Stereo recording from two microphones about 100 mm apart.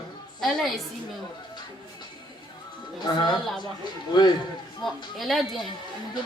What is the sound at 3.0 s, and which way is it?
Speech, 50° left (ahead or behind).